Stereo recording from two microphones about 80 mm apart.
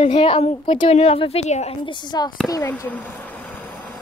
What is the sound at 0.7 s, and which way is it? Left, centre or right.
Speech, left.